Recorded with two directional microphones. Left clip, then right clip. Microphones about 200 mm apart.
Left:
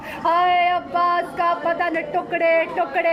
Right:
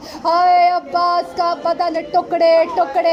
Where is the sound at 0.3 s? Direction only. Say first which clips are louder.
Right 5 dB; 25° right (ahead or behind).